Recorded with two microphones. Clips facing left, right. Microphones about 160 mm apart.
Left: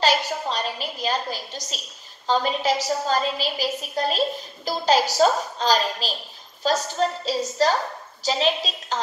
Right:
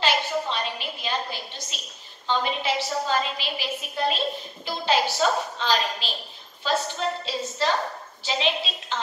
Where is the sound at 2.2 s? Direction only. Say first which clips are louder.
Left 4 dB; 40° left (ahead or behind).